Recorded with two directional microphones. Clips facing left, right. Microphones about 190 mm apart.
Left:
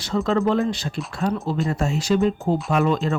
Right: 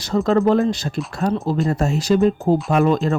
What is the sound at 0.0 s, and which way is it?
Speech, 40° right (ahead or behind).